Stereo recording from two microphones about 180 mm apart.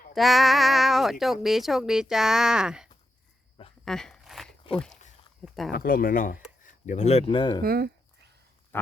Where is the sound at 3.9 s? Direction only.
5° left (ahead or behind).